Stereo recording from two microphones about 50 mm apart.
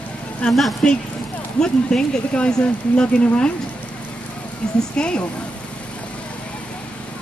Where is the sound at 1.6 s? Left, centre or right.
Centre.